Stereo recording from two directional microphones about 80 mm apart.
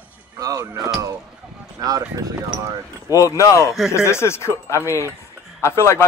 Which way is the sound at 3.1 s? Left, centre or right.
Left.